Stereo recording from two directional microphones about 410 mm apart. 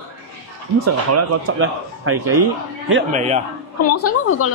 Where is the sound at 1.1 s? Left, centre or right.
Right.